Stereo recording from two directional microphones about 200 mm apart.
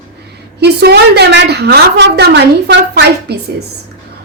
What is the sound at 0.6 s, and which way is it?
A woman's voice, 55° right (ahead or behind).